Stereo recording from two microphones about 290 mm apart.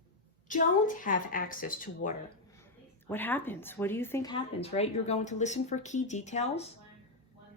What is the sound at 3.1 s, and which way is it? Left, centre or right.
A woman's voice, centre.